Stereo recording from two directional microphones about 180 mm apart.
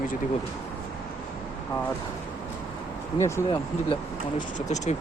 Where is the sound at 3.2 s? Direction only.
15° left (ahead or behind).